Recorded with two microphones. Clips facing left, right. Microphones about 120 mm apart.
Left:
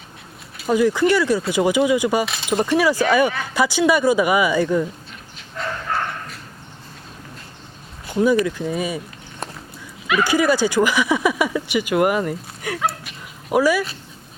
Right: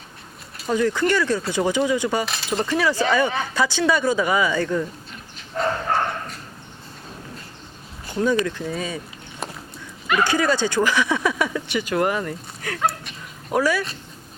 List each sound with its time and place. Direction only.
0.5 s speech: 5° left (ahead or behind)
5.5 s bow-wow: 35° right (ahead or behind)
8.0 s speech: 10° left (ahead or behind)
10.1 s speech: 5° left (ahead or behind)
12.8 s dog: 5° left (ahead or behind)